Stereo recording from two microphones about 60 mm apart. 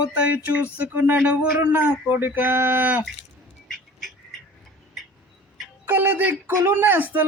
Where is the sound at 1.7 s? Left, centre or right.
Right.